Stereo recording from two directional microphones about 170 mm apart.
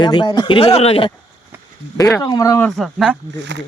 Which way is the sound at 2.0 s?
25° left (ahead or behind).